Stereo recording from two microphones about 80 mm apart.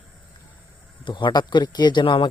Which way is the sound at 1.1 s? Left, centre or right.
Left.